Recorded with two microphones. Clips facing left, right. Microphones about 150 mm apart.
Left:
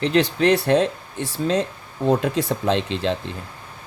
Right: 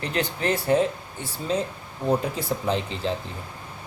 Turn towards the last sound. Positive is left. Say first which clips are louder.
# left 5 dB
turn(degrees=80)